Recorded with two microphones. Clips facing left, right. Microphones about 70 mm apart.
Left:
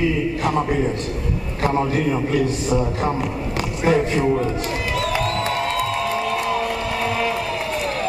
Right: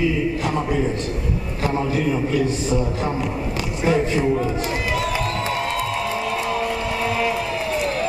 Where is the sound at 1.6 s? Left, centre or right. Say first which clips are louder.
Left 3 dB; left.